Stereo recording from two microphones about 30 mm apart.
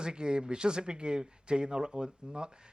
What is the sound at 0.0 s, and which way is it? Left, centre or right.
A man's voice, right.